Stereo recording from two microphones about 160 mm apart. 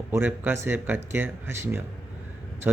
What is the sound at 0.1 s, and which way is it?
A man's voice, 15° right (ahead or behind).